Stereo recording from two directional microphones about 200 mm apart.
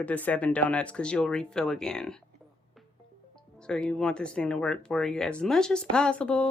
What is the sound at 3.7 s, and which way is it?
Speech, 5° left (ahead or behind).